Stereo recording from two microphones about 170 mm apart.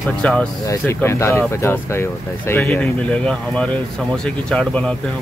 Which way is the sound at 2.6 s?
5° left (ahead or behind).